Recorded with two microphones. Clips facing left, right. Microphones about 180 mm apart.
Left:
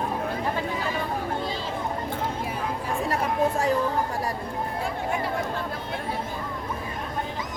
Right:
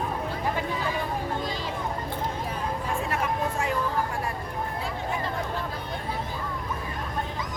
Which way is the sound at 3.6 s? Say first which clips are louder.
Left 3 dB; 35° left (ahead or behind).